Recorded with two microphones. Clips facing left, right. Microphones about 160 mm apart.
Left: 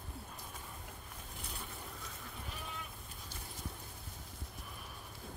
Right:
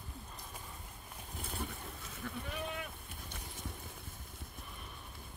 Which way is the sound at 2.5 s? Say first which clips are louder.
Right 6 dB; 65° right (ahead or behind).